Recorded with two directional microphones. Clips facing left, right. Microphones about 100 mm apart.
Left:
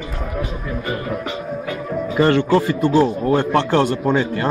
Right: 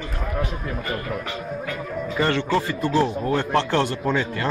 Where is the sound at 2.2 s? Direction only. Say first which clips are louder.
Left 7 dB; 45° left (ahead or behind).